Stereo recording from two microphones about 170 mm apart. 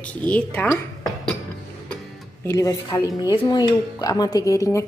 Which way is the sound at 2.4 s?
20° left (ahead or behind).